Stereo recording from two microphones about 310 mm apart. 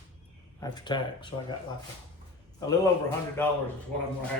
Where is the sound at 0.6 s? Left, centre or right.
Centre.